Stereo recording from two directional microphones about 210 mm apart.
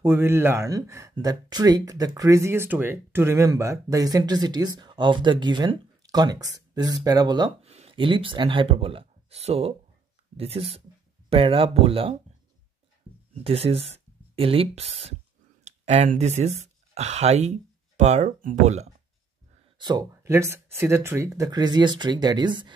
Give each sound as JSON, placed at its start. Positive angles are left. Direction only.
{"t": 0.0, "sound": "speech", "side_deg": -10}
{"t": 13.4, "sound": "speech", "side_deg": -30}
{"t": 19.8, "sound": "speech", "side_deg": -20}